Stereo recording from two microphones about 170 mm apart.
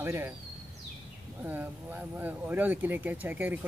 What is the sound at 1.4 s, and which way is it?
Speech, 10° right (ahead or behind).